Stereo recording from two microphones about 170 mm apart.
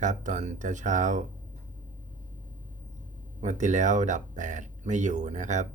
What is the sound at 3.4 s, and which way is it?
Speech, 45° right (ahead or behind).